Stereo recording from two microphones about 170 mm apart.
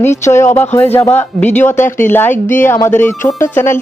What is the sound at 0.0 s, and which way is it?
Speech, 15° left (ahead or behind).